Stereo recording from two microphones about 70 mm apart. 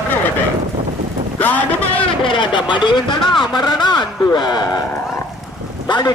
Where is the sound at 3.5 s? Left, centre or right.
Left.